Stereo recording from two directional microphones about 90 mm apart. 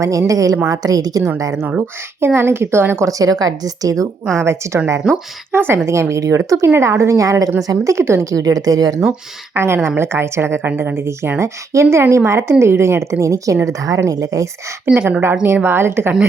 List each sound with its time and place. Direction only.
0.0 s speech: 35° right (ahead or behind)
2.2 s a woman's voice: 25° right (ahead or behind)
3.1 s speech: 40° right (ahead or behind)
9.6 s a woman's voice: 30° right (ahead or behind)
14.8 s a woman's voice: 10° right (ahead or behind)
15.6 s a woman's voice: 25° right (ahead or behind)